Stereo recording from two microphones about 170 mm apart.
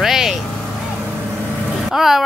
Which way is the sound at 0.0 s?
Centre (ahead or behind).